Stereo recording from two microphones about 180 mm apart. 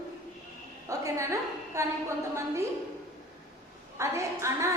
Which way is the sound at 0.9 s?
15° right (ahead or behind).